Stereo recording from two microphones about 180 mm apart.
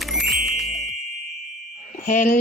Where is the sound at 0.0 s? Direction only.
Centre (ahead or behind).